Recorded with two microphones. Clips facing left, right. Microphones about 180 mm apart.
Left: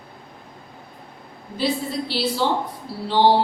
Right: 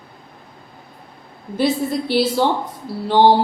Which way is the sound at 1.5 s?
50° right (ahead or behind).